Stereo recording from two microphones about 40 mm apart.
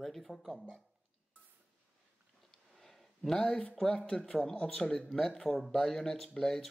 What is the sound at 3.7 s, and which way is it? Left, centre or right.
Speech, centre.